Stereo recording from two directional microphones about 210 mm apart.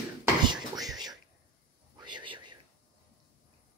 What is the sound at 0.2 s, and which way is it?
Whispering, 20° right (ahead or behind).